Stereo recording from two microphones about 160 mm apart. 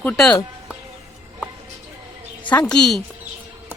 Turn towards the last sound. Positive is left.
turn(degrees=5)  # may be behind; listen again after turning